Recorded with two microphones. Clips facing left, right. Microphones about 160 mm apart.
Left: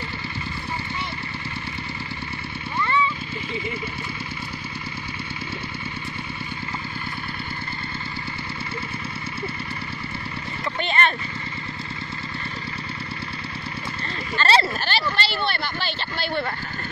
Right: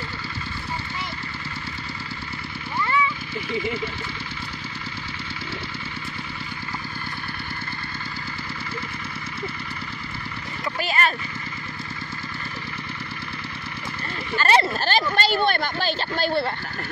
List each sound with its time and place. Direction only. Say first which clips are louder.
10.8 s a sound: left 1 dB; 5° right (ahead or behind)
14.3 s speech: right 1 dB; 15° right (ahead or behind)
14.7 s speech: right 3 dB; 40° right (ahead or behind)